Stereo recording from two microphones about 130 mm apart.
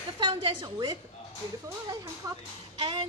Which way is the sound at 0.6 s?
30° right (ahead or behind).